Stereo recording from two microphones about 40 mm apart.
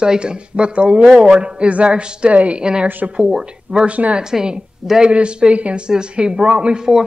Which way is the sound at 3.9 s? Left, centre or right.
Right.